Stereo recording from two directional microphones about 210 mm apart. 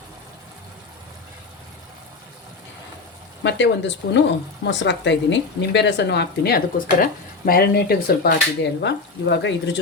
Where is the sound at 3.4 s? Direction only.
60° left (ahead or behind).